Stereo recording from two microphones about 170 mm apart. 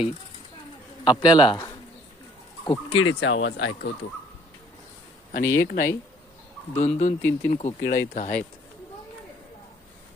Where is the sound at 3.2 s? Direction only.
90° left.